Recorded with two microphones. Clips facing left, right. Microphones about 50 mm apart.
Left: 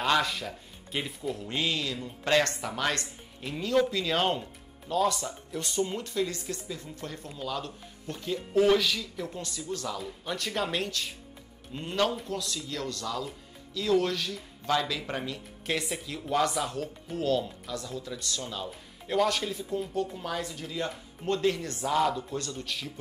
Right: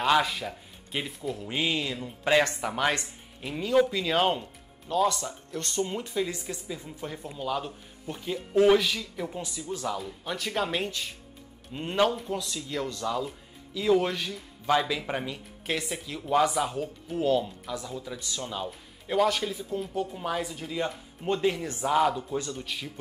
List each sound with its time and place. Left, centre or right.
0.0 s speech: centre
1.5 s speech: centre
5.9 s speech: centre
9.9 s speech: centre